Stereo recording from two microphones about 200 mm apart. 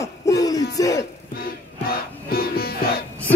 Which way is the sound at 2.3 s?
50° left (ahead or behind).